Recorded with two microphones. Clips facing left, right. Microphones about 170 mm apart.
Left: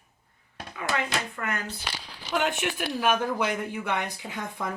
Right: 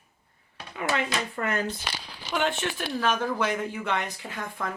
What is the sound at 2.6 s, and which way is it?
Speech, 10° left (ahead or behind).